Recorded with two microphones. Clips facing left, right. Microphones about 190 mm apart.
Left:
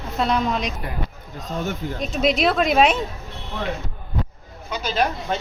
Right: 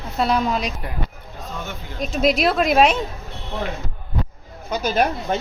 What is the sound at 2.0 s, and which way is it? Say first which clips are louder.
Speech: right 2 dB; centre (ahead or behind).